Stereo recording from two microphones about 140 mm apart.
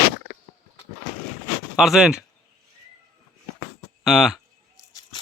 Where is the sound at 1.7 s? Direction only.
5° right (ahead or behind).